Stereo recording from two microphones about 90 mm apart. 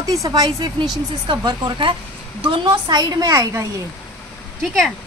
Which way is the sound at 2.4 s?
75° right (ahead or behind).